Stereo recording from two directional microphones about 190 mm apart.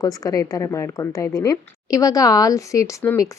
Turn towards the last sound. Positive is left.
turn(degrees=15)  # may be behind; listen again after turning